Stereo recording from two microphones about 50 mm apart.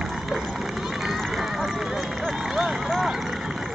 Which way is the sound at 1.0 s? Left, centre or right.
Centre.